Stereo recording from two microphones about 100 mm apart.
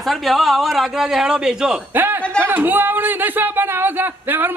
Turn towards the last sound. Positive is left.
turn(degrees=-20)  # may be behind; listen again after turning